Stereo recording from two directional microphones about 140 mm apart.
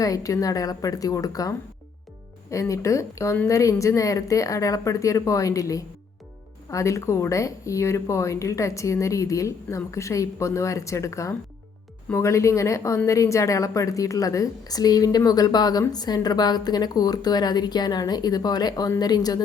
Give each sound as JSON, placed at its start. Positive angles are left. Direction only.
{"t": 0.0, "sound": "a woman's voice", "side_deg": 25}